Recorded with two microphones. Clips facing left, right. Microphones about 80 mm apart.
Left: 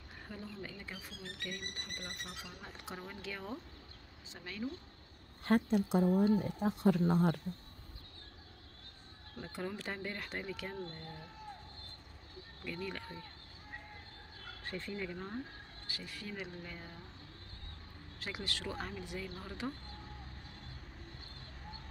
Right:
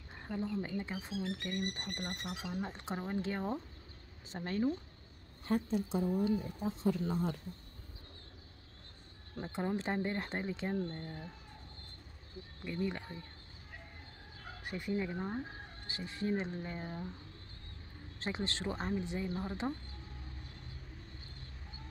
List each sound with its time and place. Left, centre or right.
0.3 s speech: right
5.4 s speech: left
9.4 s speech: right
12.6 s speech: right
14.6 s speech: centre; by 17.0 s right
18.2 s speech: right